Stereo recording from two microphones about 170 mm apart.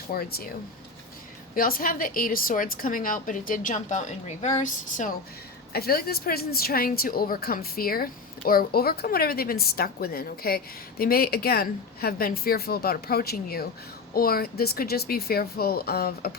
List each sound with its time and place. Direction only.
0.1 s a woman's voice: 65° left (ahead or behind)
1.5 s a woman's voice: 55° left (ahead or behind)
5.7 s a woman's voice: 65° left (ahead or behind)